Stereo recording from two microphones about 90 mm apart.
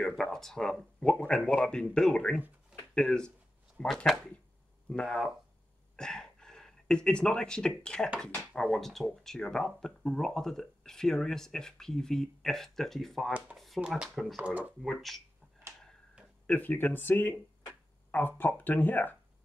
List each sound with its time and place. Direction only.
0.0 s speech: 5° left (ahead or behind)
13.7 s speech: 15° right (ahead or behind)
14.0 s speech: centre (ahead or behind)
14.4 s speech: 15° right (ahead or behind)
14.8 s speech: centre (ahead or behind)
16.4 s speech: 20° left (ahead or behind)